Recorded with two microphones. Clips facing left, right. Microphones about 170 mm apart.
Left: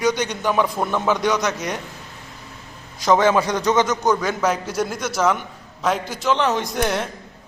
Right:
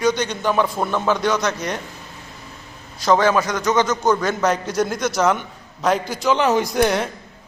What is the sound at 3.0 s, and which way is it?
A man's voice, 20° left (ahead or behind).